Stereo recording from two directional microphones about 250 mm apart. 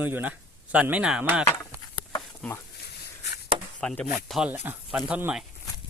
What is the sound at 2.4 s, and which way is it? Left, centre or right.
Speech, centre.